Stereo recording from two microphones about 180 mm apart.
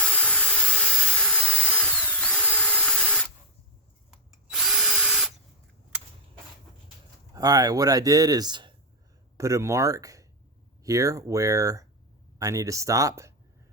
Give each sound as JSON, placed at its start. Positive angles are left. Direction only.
{"t": 0.0, "sound": "a sound", "side_deg": 10}
{"t": 4.4, "sound": "drill", "side_deg": -5}
{"t": 7.3, "sound": "speech", "side_deg": -20}